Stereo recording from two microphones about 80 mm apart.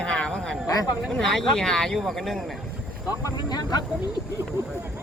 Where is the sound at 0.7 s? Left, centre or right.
Left.